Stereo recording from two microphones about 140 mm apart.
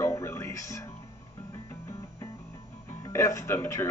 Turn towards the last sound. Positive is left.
turn(degrees=15)  # may be behind; listen again after turning